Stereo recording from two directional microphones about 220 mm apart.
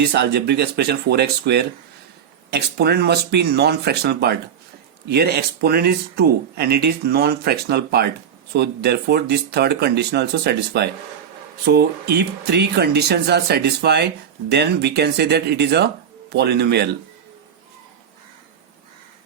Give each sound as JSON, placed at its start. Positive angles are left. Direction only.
{"t": 0.1, "sound": "speech", "side_deg": -50}